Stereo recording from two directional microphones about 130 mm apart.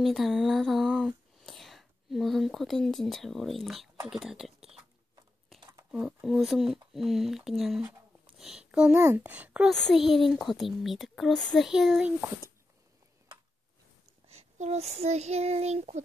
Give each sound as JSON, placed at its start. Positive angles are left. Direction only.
{"t": 0.0, "sound": "a sound", "side_deg": 0}
{"t": 4.1, "sound": "speech", "side_deg": -5}
{"t": 5.9, "sound": "a child's voice", "side_deg": -5}
{"t": 9.7, "sound": "speech", "side_deg": 0}
{"t": 14.2, "sound": "child singing", "side_deg": -55}